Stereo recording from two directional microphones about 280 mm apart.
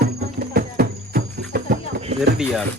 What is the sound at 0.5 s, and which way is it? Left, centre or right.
Music, right.